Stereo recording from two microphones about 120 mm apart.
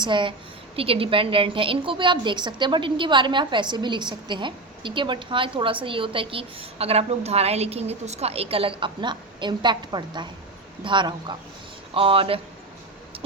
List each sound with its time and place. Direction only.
0.0 s a woman's voice: 40° right (ahead or behind)